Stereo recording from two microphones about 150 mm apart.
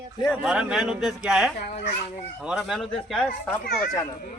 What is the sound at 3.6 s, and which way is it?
Speech, 90° left.